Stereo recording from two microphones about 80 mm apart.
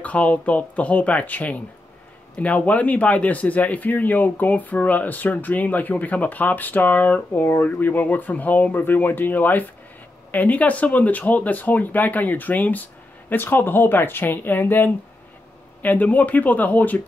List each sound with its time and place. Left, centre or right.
0.0 s speech: centre